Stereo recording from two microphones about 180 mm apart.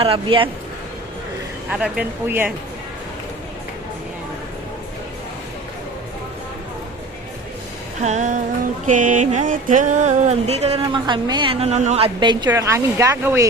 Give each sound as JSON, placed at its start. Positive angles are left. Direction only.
{"t": 0.0, "sound": "a woman's voice", "side_deg": -30}
{"t": 1.7, "sound": "speech", "side_deg": -5}
{"t": 8.0, "sound": "music", "side_deg": -40}
{"t": 8.9, "sound": "a sound", "side_deg": -45}
{"t": 10.8, "sound": "a woman's voice", "side_deg": -25}